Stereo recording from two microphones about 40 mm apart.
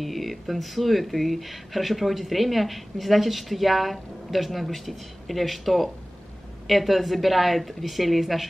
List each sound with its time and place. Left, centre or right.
0.0 s speech: centre